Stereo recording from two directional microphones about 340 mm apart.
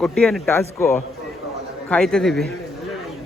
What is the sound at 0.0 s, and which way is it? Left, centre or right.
A man's voice, centre.